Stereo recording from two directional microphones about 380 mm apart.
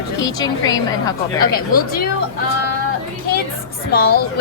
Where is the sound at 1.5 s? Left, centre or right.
Left.